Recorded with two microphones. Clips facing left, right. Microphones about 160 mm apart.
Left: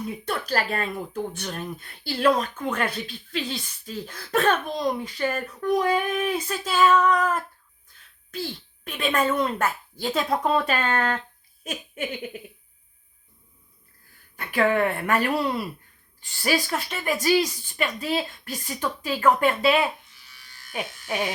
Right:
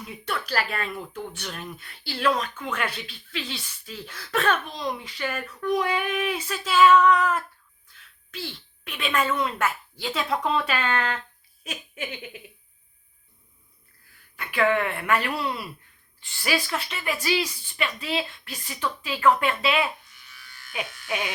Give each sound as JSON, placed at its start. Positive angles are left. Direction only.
{"t": 0.0, "sound": "speech", "side_deg": 45}
{"t": 14.3, "sound": "speech", "side_deg": 40}